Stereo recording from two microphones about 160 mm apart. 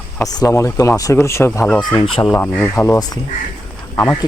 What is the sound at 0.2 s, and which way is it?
Speech, 20° left (ahead or behind).